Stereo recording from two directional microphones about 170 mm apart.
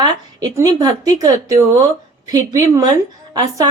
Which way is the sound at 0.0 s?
20° right (ahead or behind).